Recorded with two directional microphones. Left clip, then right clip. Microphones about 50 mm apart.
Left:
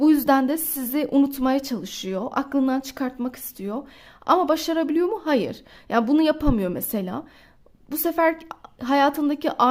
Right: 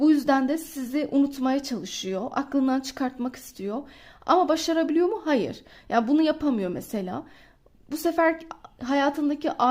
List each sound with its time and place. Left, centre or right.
0.0 s a sound: left
0.8 s a woman's voice: left
1.8 s a woman's voice: left
2.6 s speech: left
4.3 s a woman's voice: left
4.7 s a woman's voice: left
8.6 s a woman's voice: left